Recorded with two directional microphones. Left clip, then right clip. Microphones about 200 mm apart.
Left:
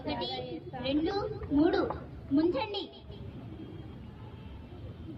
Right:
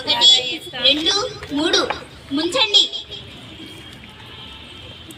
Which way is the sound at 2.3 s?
15° left (ahead or behind).